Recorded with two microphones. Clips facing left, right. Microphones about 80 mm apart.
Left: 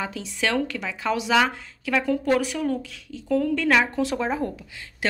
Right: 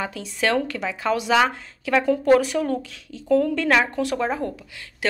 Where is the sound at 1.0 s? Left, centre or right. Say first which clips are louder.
Right 2 dB; centre.